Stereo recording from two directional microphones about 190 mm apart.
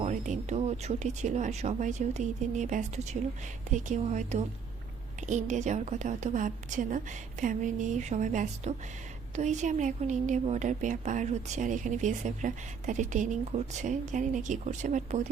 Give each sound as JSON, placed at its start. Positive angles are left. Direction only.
{"t": 0.0, "sound": "a woman's voice", "side_deg": -40}